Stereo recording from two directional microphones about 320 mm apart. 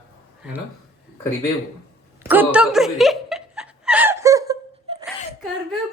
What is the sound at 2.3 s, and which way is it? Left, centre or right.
Chuckle, centre.